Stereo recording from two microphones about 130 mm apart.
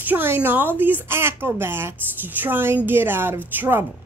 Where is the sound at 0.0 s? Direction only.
15° right (ahead or behind).